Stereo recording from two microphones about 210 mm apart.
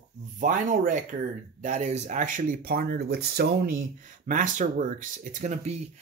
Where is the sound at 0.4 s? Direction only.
40° right (ahead or behind).